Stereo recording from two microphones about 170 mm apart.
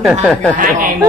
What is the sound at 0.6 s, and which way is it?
Speech, 55° right (ahead or behind).